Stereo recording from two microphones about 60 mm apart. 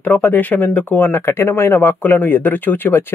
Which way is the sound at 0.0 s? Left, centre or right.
Left.